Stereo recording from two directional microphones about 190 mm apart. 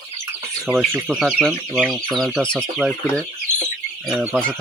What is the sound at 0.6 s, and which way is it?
Speech, 5° left (ahead or behind).